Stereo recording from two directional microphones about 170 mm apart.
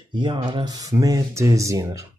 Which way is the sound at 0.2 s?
30° right (ahead or behind).